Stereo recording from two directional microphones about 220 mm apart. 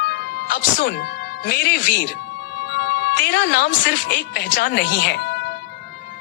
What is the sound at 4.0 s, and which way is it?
Speech, 40° left (ahead or behind).